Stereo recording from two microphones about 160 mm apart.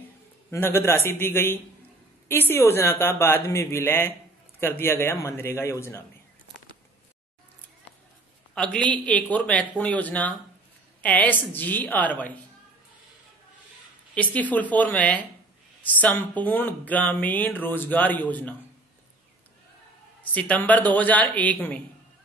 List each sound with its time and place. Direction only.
0.5 s speech: 15° left (ahead or behind)
8.5 s speech: 5° left (ahead or behind)
14.1 s speech: 10° left (ahead or behind)
20.2 s speech: 10° left (ahead or behind)